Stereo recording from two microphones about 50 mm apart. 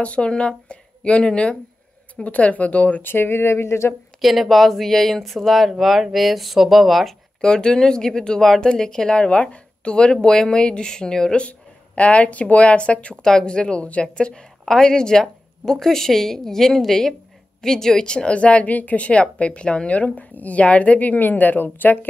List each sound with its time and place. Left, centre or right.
0.0 s a woman's voice: left
3.0 s speech: left
4.2 s speech: centre
7.4 s speech: centre
11.4 s a woman's voice: left